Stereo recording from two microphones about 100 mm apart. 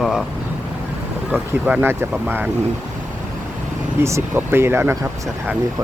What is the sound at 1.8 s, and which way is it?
Speech, 25° right (ahead or behind).